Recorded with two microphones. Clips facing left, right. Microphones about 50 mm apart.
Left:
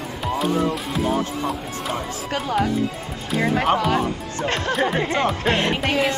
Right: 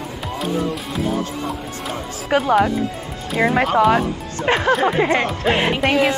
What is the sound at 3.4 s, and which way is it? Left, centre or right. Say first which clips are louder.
Speech: right 5 dB; right.